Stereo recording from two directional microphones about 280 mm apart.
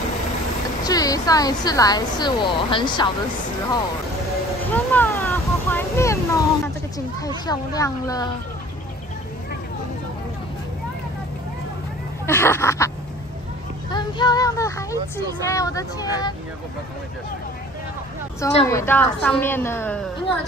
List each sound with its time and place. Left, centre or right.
0.8 s speech: centre
4.6 s a sound: centre
7.2 s speech: centre
12.3 s speech: centre
13.8 s child singing: centre
15.4 s speech: centre
18.4 s a woman's voice: left
18.7 s speech: centre